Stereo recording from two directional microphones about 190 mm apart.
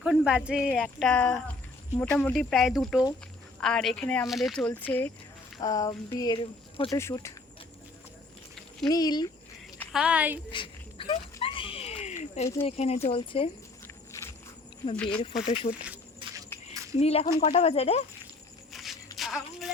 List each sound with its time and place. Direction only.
0.0 s speech: 5° right (ahead or behind); by 6.9 s 25° left (ahead or behind)
6.9 s speech: 15° left (ahead or behind)
8.9 s speech: 20° left (ahead or behind)
9.9 s a woman's voice: 5° right (ahead or behind)
10.5 s a sound: 25° left (ahead or behind)
12.6 s speech: 35° left (ahead or behind)
13.8 s walk: 15° left (ahead or behind)
15.4 s speech: 30° left (ahead or behind)
16.7 s a sound: 15° right (ahead or behind)
17.0 s speech: 30° left (ahead or behind)
18.7 s a sound: centre (ahead or behind)
19.1 s music: centre (ahead or behind)